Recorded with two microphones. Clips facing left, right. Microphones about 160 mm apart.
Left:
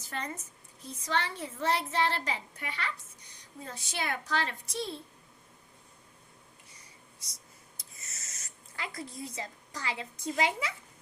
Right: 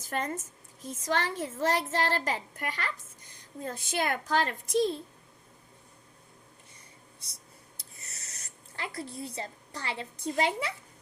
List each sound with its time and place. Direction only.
0.1 s a child's voice: 45° right (ahead or behind)
7.2 s writing: 60° right (ahead or behind)
8.8 s a woman's voice: 30° right (ahead or behind)